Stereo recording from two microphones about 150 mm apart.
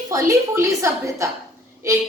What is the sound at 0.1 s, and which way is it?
A woman's voice, 20° right (ahead or behind).